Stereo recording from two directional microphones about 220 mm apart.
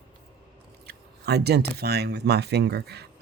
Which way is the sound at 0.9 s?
45° right (ahead or behind).